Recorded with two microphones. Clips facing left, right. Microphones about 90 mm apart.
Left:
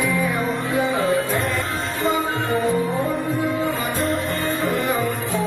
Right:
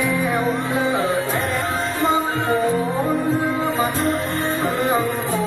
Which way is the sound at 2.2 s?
35° right (ahead or behind).